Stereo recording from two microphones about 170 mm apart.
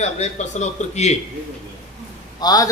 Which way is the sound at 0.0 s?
40° left (ahead or behind).